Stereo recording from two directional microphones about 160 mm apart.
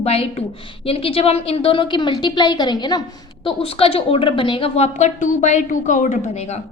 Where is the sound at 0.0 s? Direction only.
40° left (ahead or behind).